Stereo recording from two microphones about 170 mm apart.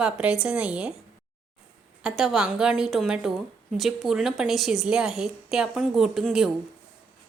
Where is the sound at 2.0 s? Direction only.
Centre (ahead or behind).